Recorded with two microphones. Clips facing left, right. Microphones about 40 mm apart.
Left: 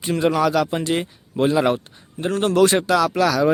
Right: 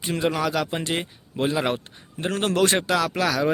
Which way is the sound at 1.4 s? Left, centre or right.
Centre.